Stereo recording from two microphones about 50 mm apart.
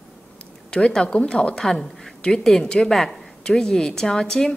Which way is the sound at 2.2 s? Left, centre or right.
Centre.